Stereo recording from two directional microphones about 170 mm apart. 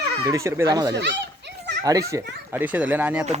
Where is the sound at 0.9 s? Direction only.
90° right.